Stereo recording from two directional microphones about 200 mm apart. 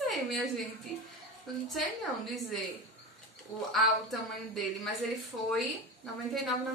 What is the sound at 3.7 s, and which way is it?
Speech, centre (ahead or behind).